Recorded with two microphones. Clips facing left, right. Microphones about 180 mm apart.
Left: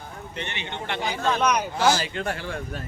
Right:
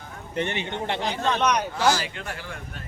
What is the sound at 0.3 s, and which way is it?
Speech, 45° right (ahead or behind).